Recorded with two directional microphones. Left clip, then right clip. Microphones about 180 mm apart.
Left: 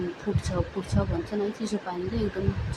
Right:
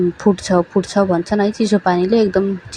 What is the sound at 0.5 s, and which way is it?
Speech, 45° right (ahead or behind).